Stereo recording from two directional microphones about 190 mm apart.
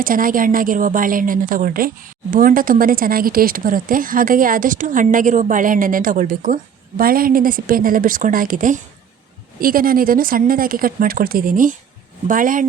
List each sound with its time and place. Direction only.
0.0 s a woman's voice: 45° right (ahead or behind)